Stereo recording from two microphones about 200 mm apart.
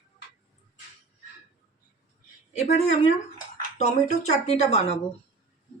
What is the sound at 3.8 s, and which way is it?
Speech, 35° left (ahead or behind).